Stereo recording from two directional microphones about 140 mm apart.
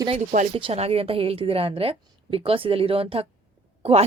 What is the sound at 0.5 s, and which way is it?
A woman's voice, 45° right (ahead or behind).